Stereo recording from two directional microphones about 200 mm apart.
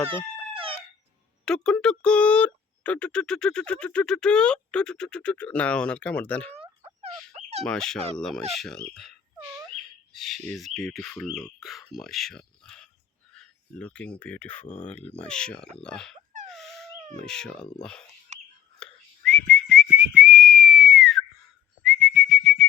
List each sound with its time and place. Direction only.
0.5 s chicken: 25° right (ahead or behind)
1.5 s speech: 5° left (ahead or behind)
6.5 s a sound: 30° right (ahead or behind)
7.7 s speech: centre (ahead or behind)
16.5 s dog: centre (ahead or behind)
17.2 s speech: 5° left (ahead or behind)
18.3 s bird: 35° right (ahead or behind)
18.8 s whistling: 5° left (ahead or behind)